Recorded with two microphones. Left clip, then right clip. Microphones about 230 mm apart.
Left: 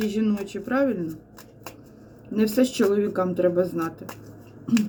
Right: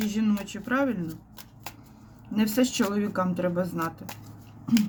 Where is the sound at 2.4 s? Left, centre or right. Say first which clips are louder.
Left 5 dB; right.